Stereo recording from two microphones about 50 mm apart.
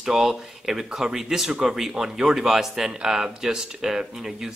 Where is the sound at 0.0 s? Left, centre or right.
Centre.